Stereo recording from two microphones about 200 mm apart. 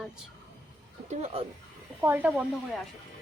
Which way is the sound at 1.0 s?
35° right (ahead or behind).